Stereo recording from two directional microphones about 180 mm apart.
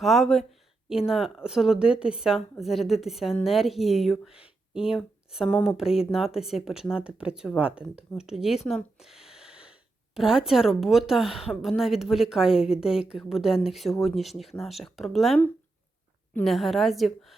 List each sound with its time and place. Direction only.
0.0 s a woman's voice: centre (ahead or behind)
9.0 s a sound: centre (ahead or behind)
10.2 s a woman's voice: 5° right (ahead or behind)